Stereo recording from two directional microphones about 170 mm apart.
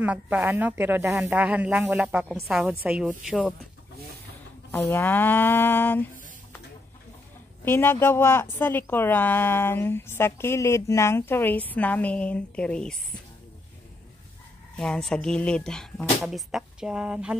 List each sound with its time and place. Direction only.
0.0 s a woman's voice: 10° right (ahead or behind)
4.6 s speech: 15° left (ahead or behind)
7.6 s speech: 15° left (ahead or behind)
14.8 s speech: 5° left (ahead or behind)